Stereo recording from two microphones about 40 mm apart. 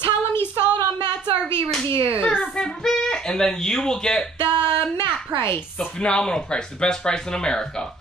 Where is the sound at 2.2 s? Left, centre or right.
Left.